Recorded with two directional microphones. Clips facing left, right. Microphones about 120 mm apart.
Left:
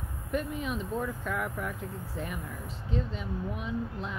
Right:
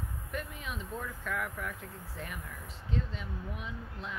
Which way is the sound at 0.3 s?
20° left (ahead or behind).